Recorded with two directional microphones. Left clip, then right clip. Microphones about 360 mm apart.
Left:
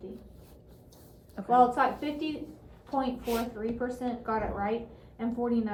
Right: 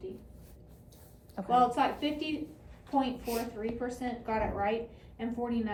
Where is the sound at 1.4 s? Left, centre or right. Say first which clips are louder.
Left 2 dB; centre.